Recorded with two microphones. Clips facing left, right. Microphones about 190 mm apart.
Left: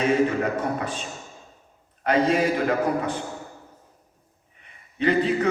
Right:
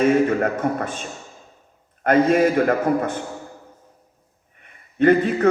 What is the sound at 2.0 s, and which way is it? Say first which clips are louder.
A man's voice: right 5 dB; 50° right (ahead or behind).